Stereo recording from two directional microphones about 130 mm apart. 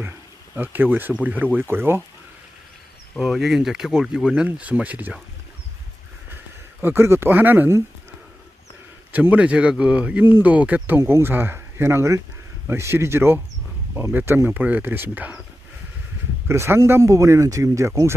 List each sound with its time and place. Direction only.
0.6 s speech: 15° right (ahead or behind)
3.2 s speech: 5° right (ahead or behind)
6.8 s speech: 15° right (ahead or behind)
9.1 s speech: 10° right (ahead or behind)
16.4 s speech: 20° right (ahead or behind)